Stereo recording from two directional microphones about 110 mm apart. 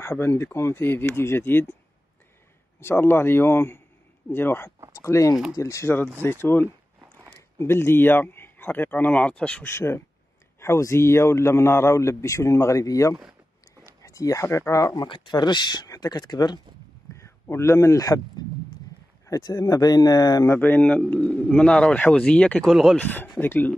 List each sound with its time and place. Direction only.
0.0 s a man's voice: 25° left (ahead or behind)
2.8 s a man's voice: 20° left (ahead or behind)
9.7 s a man's voice: 25° left (ahead or behind)
15.0 s speech: 45° left (ahead or behind)
17.1 s speech: 25° left (ahead or behind)
19.2 s speech: 30° left (ahead or behind)
20.4 s speech: 20° left (ahead or behind)
22.7 s speech: centre (ahead or behind)
22.9 s speech: 15° left (ahead or behind)